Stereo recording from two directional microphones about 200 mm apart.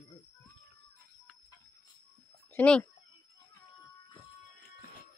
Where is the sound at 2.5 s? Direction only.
5° left (ahead or behind).